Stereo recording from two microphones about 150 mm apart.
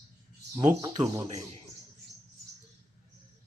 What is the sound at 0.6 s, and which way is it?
Speech, 30° right (ahead or behind).